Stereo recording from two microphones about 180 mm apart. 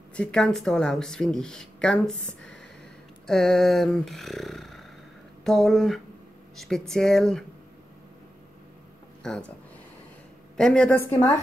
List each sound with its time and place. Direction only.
0.1 s speech: 5° left (ahead or behind)
10.6 s a woman's voice: 5° left (ahead or behind)